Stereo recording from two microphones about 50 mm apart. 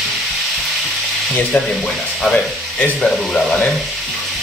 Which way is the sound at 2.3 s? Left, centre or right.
Centre.